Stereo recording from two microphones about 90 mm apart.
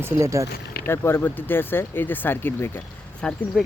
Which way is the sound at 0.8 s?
25° left (ahead or behind).